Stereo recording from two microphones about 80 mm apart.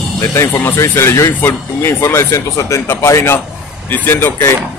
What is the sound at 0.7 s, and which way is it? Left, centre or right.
Speech, left.